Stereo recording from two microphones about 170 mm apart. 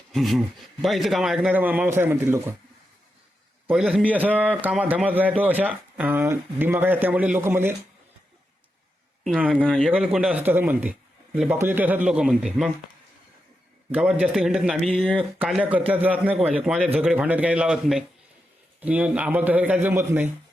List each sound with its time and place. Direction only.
0.1 s a man's voice: centre (ahead or behind)
3.7 s speech: 5° right (ahead or behind)
9.2 s a man's voice: 5° right (ahead or behind)
9.6 s a man's voice: 5° left (ahead or behind)
13.9 s a man's voice: 5° right (ahead or behind)